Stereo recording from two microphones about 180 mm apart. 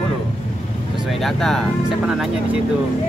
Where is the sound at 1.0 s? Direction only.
Centre (ahead or behind).